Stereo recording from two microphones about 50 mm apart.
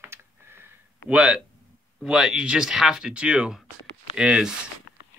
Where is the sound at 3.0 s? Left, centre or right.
Right.